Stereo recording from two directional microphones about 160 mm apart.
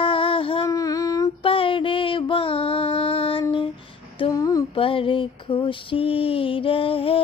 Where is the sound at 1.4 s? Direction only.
35° left (ahead or behind).